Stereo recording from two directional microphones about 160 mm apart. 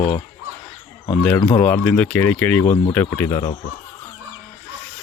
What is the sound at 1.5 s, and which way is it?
Speech, 10° left (ahead or behind).